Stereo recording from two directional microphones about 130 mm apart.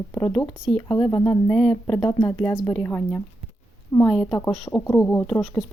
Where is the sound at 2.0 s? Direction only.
30° left (ahead or behind).